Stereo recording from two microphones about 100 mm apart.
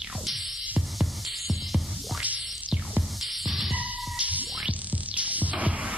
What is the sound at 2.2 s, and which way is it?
Music, 15° right (ahead or behind).